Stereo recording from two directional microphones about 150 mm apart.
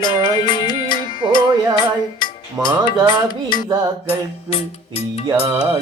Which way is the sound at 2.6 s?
25° right (ahead or behind).